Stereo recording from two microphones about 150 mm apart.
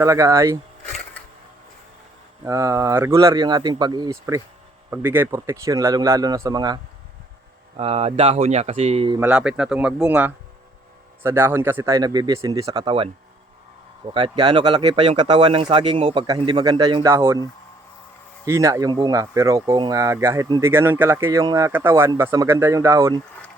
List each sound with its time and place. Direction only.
0.0 s speech: 20° right (ahead or behind)
2.4 s speech: 20° right (ahead or behind)
4.9 s speech: 15° right (ahead or behind)
7.8 s speech: 40° right (ahead or behind)
9.2 s speech: 5° right (ahead or behind); by 12.9 s 25° right (ahead or behind)
14.1 s speech: 30° right (ahead or behind)
16.1 s speech: 25° right (ahead or behind)